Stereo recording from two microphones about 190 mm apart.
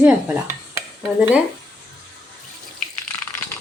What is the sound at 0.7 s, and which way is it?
Dishes, 10° right (ahead or behind).